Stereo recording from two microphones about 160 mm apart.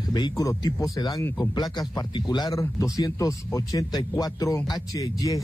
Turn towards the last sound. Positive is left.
turn(degrees=20)  # may be behind; listen again after turning